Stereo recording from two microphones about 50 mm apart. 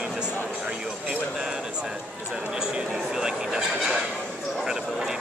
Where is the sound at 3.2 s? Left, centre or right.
Centre.